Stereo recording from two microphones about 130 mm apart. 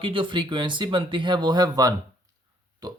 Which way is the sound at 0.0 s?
40° right (ahead or behind).